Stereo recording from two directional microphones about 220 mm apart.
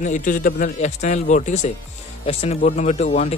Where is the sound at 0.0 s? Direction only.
35° left (ahead or behind).